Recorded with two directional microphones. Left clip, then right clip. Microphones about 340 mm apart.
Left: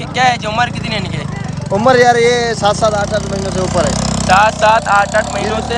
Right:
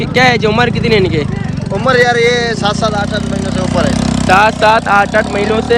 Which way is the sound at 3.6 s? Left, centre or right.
Left.